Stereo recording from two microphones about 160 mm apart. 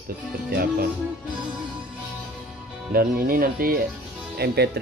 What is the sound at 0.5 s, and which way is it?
Music, 75° right (ahead or behind).